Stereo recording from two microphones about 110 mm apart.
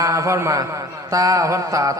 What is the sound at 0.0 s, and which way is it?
A man's voice, 30° right (ahead or behind).